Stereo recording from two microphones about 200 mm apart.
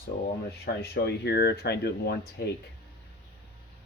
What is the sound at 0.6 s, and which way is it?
Speech, 55° left (ahead or behind).